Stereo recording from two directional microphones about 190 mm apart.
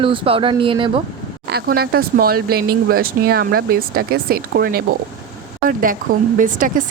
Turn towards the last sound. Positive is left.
turn(degrees=-45)  # may be behind; listen again after turning